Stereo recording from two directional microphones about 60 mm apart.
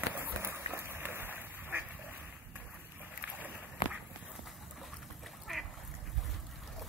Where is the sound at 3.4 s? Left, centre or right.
Right.